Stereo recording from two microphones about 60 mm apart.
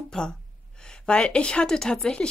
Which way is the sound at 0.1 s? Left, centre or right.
Centre.